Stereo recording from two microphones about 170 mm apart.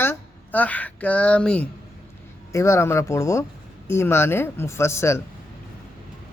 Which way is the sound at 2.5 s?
15° left (ahead or behind).